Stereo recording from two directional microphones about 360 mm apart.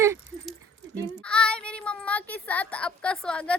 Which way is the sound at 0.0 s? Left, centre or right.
Centre.